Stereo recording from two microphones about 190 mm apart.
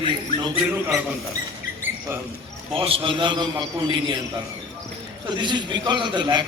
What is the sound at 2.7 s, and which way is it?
A man's voice, 30° right (ahead or behind).